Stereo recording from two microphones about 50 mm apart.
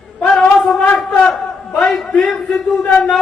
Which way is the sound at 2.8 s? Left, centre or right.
Left.